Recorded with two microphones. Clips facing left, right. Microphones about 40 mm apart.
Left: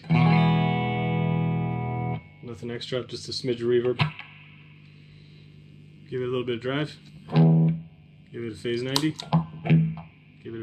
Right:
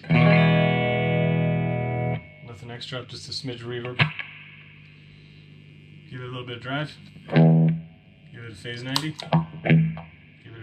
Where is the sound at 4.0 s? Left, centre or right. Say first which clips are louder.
Right 5 dB; right.